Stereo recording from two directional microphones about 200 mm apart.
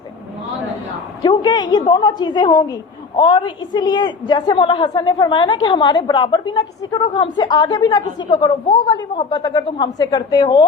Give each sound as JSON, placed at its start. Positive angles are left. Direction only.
{"t": 1.2, "sound": "a woman's voice", "side_deg": 20}